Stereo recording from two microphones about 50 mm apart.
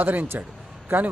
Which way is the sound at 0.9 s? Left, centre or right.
Right.